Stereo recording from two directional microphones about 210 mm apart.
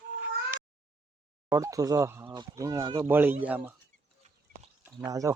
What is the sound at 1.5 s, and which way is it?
Speech, 15° right (ahead or behind).